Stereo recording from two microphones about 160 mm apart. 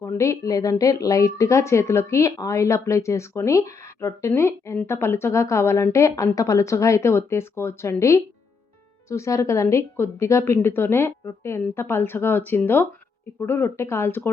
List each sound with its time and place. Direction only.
0.0 s a woman's voice: 20° left (ahead or behind)